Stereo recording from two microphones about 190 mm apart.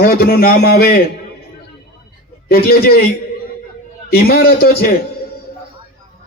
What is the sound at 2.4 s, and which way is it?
Speech, 55° left (ahead or behind).